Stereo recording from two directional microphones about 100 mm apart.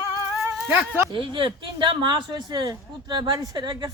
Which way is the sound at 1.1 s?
60° right (ahead or behind).